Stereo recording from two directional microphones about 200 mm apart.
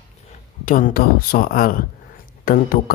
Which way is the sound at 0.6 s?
40° left (ahead or behind).